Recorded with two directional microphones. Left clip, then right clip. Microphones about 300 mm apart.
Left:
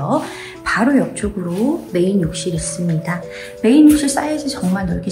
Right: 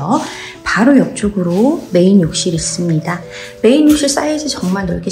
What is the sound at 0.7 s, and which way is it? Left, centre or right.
A woman's voice, centre.